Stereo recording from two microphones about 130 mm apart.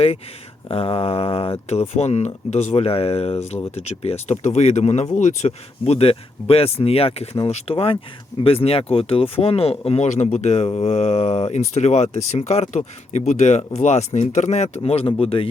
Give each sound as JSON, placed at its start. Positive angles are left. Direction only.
{"t": 0.7, "sound": "speech", "side_deg": 50}